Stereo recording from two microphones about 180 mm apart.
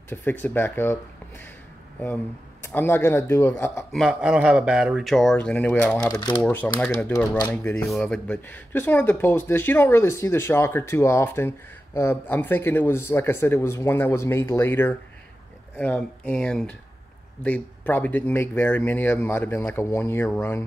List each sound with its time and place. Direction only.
0.1 s speech: 10° left (ahead or behind)
2.6 s speech: 10° left (ahead or behind)
3.9 s speech: 5° right (ahead or behind)
6.1 s speech: 20° left (ahead or behind)
6.4 s speech: 5° left (ahead or behind)